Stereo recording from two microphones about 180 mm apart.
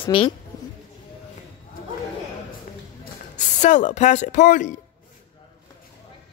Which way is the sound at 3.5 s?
45° left (ahead or behind).